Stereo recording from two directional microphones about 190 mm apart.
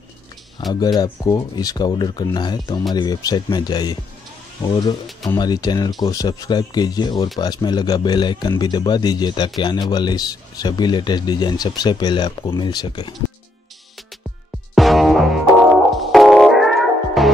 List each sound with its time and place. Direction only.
0.7 s a man's voice: 20° left (ahead or behind)
14.8 s music: centre (ahead or behind)